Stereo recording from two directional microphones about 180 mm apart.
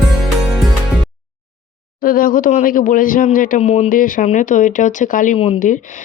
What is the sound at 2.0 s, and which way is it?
Speech, 50° left (ahead or behind).